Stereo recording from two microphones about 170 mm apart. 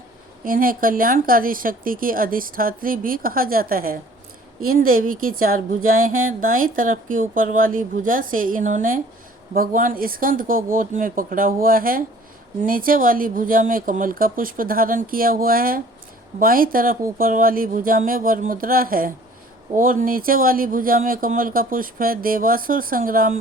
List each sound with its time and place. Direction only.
0.4 s a woman's voice: 55° right (ahead or behind)